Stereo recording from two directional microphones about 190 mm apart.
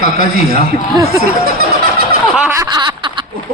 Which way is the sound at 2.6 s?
25° right (ahead or behind).